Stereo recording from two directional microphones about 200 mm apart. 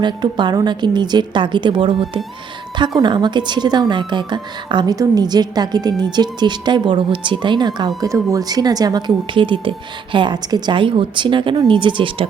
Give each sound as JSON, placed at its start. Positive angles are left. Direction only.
{"t": 0.0, "sound": "a woman's voice", "side_deg": -20}